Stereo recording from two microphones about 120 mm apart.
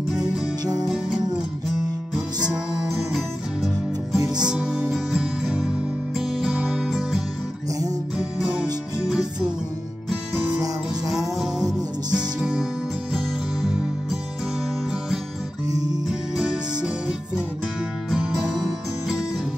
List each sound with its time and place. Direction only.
0.7 s music: 5° right (ahead or behind)
15.7 s music: 35° right (ahead or behind)
16.1 s music: 5° right (ahead or behind)
18.1 s music: 5° right (ahead or behind)